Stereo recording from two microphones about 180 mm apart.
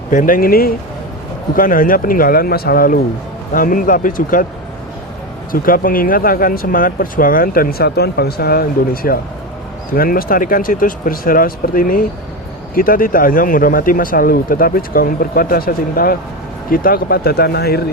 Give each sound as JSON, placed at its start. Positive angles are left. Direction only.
{"t": 0.1, "sound": "speech", "side_deg": 50}
{"t": 5.5, "sound": "speech", "side_deg": 50}